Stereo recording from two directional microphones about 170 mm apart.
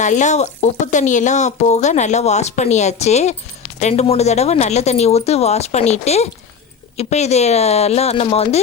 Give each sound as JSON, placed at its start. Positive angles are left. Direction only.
{"t": 0.0, "sound": "speech", "side_deg": 45}